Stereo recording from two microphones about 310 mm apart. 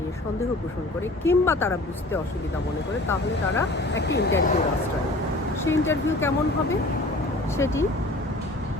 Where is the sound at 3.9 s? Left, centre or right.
Left.